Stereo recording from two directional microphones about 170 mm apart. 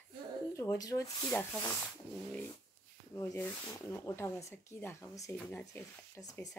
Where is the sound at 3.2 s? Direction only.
15° left (ahead or behind).